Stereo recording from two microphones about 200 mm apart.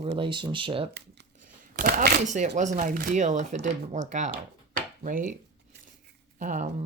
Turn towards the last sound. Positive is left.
turn(degrees=-40)  # may be behind; listen again after turning